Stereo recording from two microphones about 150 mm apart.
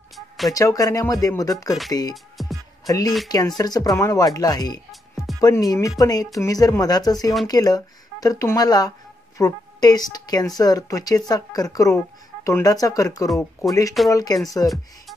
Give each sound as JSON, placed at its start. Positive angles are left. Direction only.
{"t": 0.5, "sound": "speech", "side_deg": 25}
{"t": 2.3, "sound": "music", "side_deg": 0}
{"t": 2.9, "sound": "speech", "side_deg": 25}
{"t": 5.1, "sound": "music", "side_deg": 0}
{"t": 5.4, "sound": "speech", "side_deg": 25}